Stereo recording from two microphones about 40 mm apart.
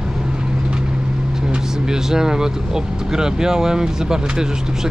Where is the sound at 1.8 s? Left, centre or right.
Centre.